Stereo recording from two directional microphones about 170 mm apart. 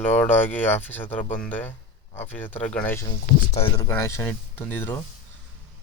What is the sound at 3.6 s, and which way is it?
Speech, 30° left (ahead or behind).